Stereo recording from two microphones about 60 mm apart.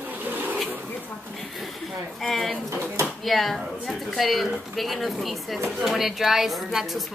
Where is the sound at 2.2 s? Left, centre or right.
Centre.